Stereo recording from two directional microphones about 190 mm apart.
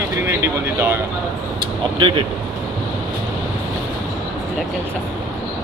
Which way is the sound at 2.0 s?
25° right (ahead or behind).